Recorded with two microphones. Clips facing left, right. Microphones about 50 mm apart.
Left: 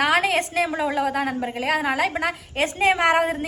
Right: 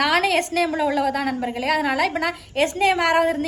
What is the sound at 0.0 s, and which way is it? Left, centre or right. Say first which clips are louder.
A woman's voice: right 1 dB; centre.